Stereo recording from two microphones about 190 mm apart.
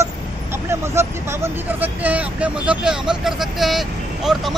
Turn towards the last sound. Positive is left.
turn(degrees=0)  # may be behind; listen again after turning